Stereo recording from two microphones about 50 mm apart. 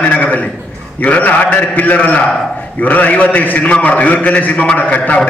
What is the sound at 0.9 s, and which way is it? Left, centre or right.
A man's voice, left.